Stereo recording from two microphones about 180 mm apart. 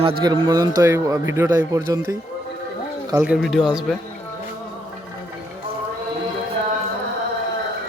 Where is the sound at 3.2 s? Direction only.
Centre (ahead or behind).